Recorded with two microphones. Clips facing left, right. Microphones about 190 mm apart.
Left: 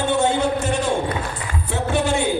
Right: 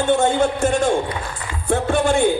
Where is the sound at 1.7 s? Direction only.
50° right (ahead or behind).